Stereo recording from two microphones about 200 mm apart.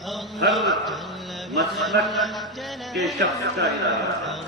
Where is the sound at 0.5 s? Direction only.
Centre (ahead or behind).